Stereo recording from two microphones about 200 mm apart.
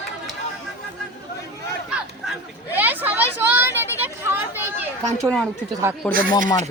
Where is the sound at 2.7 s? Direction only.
10° right (ahead or behind).